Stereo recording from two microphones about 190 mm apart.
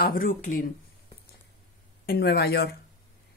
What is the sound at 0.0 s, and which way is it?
Speech, 50° left (ahead or behind).